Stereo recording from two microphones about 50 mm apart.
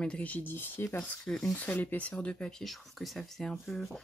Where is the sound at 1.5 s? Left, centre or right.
Left.